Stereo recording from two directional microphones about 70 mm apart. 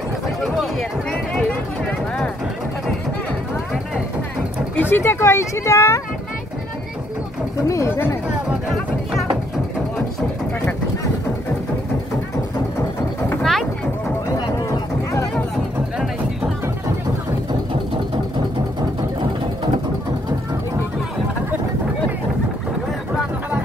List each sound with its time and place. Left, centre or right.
0.4 s a sound: centre
1.9 s a sound: centre
4.7 s speech: left
7.6 s speech: left
7.9 s speech: left
13.4 s vehicle: centre